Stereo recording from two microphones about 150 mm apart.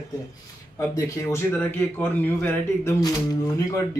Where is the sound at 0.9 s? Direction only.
20° left (ahead or behind).